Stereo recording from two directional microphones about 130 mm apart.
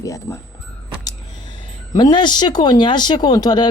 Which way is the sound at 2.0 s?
35° left (ahead or behind).